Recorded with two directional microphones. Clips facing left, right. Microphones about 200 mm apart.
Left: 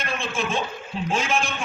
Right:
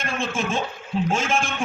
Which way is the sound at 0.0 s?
45° right (ahead or behind).